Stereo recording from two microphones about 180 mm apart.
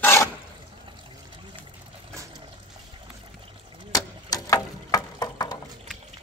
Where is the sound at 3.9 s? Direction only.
20° left (ahead or behind).